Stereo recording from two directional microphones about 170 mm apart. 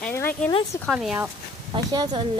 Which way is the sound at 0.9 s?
Centre (ahead or behind).